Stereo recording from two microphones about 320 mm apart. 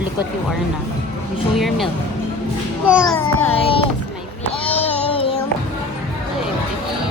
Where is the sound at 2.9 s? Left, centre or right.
Centre.